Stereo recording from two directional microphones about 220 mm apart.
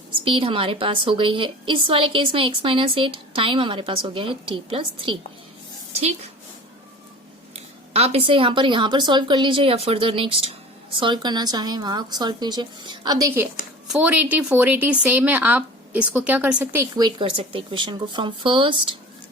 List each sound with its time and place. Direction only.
0.3 s a woman's voice: 25° right (ahead or behind)
7.9 s a woman's voice: 30° right (ahead or behind)